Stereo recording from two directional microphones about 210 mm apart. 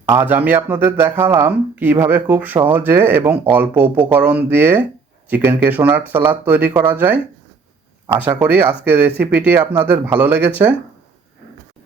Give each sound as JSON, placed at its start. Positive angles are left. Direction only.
{"t": 0.1, "sound": "speech", "side_deg": -10}
{"t": 8.3, "sound": "speech", "side_deg": -10}